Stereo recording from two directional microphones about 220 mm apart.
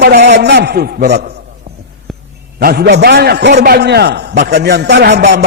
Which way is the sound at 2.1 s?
Centre (ahead or behind).